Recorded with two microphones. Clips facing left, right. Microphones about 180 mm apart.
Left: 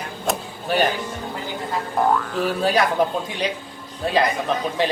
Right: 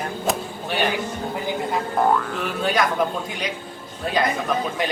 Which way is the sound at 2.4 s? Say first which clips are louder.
Left 5 dB; 35° left (ahead or behind).